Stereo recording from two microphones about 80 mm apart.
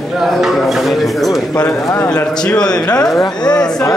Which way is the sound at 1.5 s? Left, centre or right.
Left.